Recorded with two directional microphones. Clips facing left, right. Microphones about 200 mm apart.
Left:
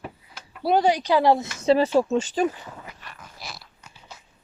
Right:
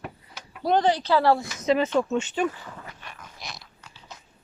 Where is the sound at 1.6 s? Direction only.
30° left (ahead or behind).